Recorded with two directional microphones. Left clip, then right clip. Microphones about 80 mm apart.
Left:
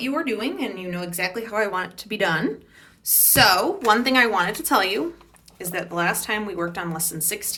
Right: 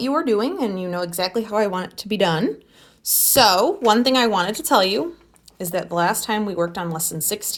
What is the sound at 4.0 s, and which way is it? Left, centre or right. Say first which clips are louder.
Speech: right 1 dB; right.